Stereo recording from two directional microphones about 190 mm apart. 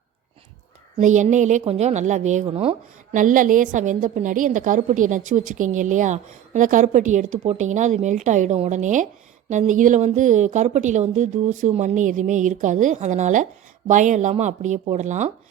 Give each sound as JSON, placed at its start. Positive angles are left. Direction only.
{"t": 0.9, "sound": "a woman's voice", "side_deg": -40}